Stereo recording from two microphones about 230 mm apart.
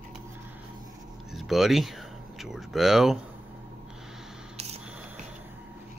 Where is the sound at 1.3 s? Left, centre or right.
Centre.